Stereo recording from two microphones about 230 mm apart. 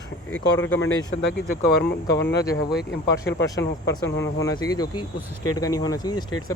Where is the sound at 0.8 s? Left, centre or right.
Left.